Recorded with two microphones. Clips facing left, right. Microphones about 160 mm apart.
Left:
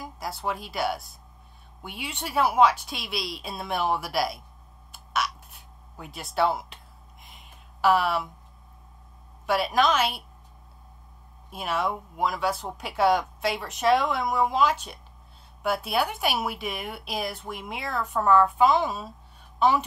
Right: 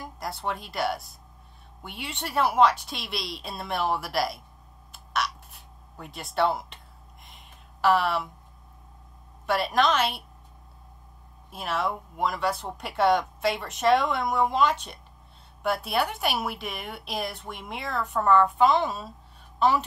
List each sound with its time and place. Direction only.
0.0 s a woman's voice: centre (ahead or behind)
4.9 s a sound: centre (ahead or behind)
9.5 s a woman's voice: centre (ahead or behind)
11.5 s a woman's voice: centre (ahead or behind)